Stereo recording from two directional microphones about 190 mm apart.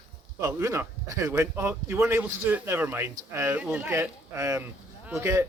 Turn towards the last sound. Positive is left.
turn(degrees=-15)  # may be behind; listen again after turning